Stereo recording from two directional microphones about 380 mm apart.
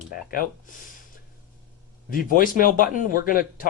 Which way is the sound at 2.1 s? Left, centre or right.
Left.